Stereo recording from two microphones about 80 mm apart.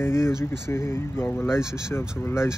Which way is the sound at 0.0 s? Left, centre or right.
Left.